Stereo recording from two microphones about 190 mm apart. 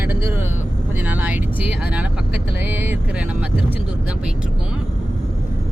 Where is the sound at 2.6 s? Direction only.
10° right (ahead or behind).